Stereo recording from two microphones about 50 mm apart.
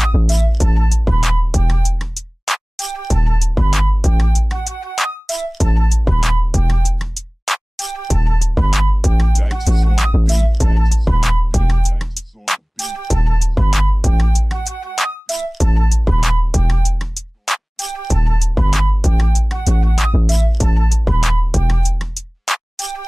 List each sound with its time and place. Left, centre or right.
0.3 s music: centre